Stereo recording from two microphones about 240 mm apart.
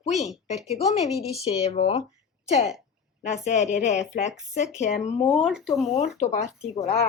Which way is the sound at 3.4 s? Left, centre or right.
Left.